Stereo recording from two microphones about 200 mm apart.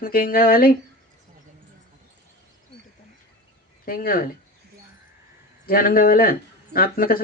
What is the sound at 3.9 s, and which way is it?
Speech, 45° left (ahead or behind).